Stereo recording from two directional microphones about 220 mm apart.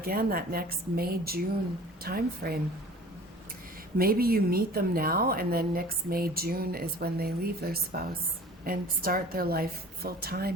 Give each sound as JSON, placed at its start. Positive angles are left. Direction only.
{"t": 0.0, "sound": "a woman's voice", "side_deg": -40}
{"t": 3.9, "sound": "a woman's voice", "side_deg": -40}